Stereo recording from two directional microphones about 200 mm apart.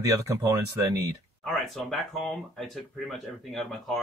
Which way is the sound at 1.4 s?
Centre (ahead or behind).